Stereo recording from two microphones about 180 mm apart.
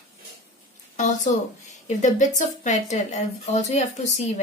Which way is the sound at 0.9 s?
45° left (ahead or behind).